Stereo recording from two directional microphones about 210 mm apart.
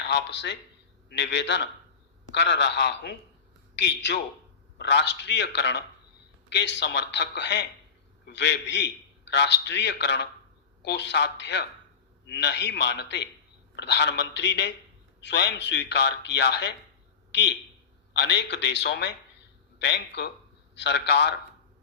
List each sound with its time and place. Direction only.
0.1 s a man's voice: 55° left (ahead or behind)